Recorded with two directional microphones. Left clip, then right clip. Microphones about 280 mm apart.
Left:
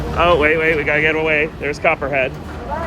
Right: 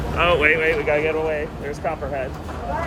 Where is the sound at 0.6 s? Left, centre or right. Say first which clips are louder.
Left 4 dB; left.